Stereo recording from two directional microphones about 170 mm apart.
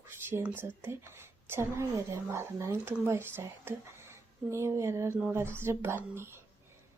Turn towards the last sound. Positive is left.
turn(degrees=-15)  # may be behind; listen again after turning